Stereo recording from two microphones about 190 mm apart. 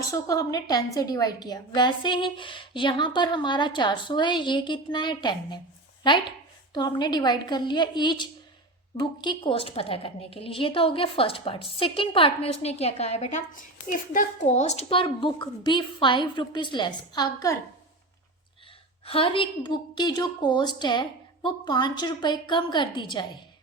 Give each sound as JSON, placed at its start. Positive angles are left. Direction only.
{"t": 0.1, "sound": "a woman's voice", "side_deg": 15}
{"t": 19.0, "sound": "a woman's voice", "side_deg": 30}